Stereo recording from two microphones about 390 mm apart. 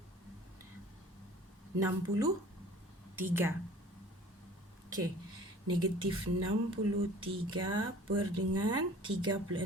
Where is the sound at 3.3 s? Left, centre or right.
Centre.